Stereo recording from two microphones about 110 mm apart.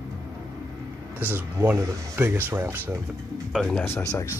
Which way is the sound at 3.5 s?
5° left (ahead or behind).